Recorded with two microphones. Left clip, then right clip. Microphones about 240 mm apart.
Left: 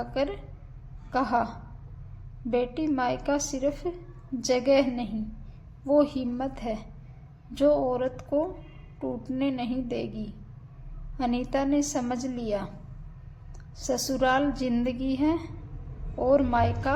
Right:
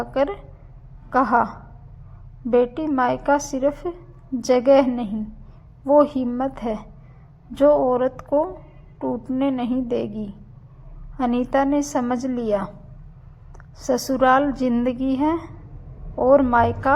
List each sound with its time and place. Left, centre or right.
0.0 s a woman's voice: right
13.7 s a woman's voice: right